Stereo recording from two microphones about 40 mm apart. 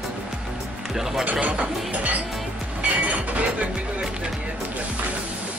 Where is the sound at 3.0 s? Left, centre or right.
Right.